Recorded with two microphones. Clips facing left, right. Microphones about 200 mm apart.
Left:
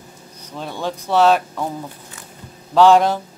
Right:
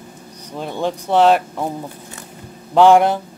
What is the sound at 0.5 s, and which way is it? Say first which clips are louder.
Speech: right 4 dB; 15° right (ahead or behind).